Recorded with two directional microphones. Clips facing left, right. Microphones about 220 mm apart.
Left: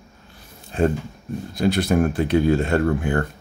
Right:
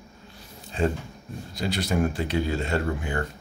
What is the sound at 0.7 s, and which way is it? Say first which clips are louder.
Speech: left 5 dB; 55° left (ahead or behind).